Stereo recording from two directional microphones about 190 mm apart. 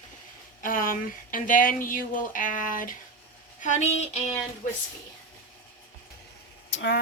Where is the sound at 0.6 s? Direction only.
45° left (ahead or behind).